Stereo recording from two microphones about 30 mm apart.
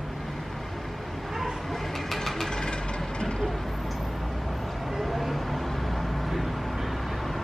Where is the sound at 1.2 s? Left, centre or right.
Centre.